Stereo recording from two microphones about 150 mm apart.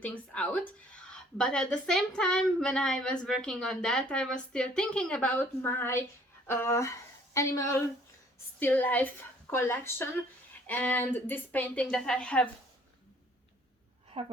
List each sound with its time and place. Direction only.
0.0 s a woman's voice: 10° left (ahead or behind)
14.2 s a woman's voice: 40° right (ahead or behind)